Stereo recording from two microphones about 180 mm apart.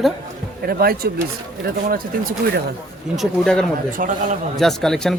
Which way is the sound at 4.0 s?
50° right (ahead or behind).